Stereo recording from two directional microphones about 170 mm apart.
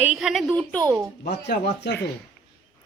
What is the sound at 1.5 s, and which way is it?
Speech, 80° left.